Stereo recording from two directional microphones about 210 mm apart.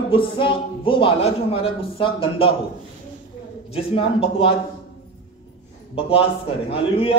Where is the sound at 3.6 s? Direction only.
25° left (ahead or behind).